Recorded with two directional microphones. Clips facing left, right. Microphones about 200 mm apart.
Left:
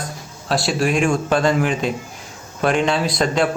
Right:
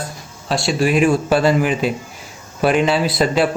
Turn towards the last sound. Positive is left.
turn(degrees=-5)  # may be behind; listen again after turning